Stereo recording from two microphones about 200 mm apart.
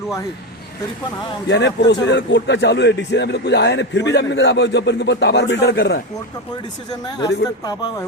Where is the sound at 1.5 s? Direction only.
60° left (ahead or behind).